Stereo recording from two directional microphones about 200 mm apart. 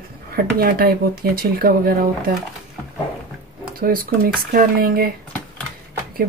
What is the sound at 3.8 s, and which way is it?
Speech, 45° right (ahead or behind).